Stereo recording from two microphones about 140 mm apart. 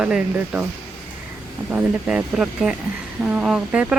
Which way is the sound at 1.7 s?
5° right (ahead or behind).